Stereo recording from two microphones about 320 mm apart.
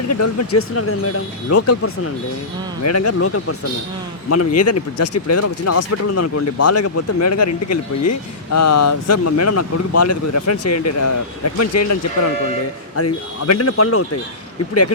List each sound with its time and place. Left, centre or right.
0.1 s speech: left
13.0 s speech: left